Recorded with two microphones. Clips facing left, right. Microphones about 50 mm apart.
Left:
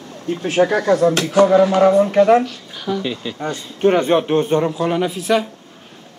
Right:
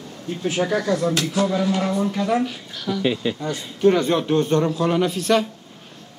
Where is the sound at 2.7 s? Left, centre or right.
Centre.